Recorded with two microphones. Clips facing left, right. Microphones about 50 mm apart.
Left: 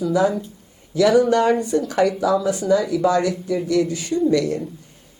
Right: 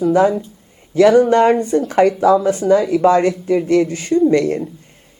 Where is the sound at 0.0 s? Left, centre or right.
Right.